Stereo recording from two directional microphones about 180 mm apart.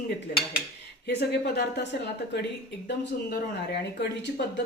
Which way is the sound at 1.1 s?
70° left (ahead or behind).